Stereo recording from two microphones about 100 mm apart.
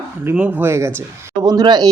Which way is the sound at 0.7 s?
25° right (ahead or behind).